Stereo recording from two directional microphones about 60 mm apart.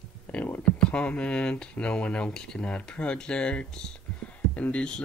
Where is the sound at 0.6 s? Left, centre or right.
Centre.